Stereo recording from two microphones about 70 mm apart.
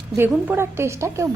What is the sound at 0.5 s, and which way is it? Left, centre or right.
Speech, right.